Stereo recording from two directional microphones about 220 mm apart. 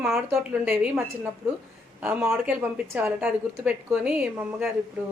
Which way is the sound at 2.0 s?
10° right (ahead or behind).